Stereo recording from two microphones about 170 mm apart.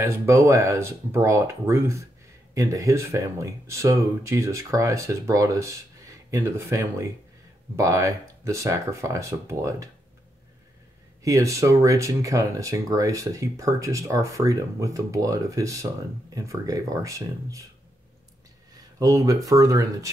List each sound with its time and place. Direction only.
0.5 s speech: 15° right (ahead or behind)
11.2 s speech: 20° right (ahead or behind)
18.9 s speech: 20° right (ahead or behind)